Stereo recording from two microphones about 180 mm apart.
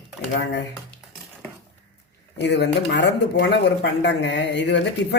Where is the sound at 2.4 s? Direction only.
70° left (ahead or behind).